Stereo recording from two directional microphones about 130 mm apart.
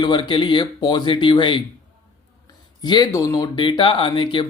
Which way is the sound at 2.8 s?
30° left (ahead or behind).